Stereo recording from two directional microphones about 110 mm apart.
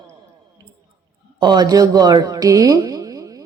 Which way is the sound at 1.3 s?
40° right (ahead or behind).